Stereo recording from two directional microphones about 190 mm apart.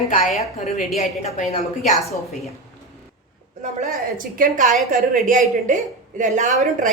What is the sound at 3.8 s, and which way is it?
A woman's voice, 45° right (ahead or behind).